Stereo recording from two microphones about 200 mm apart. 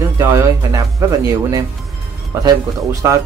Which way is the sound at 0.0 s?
15° right (ahead or behind).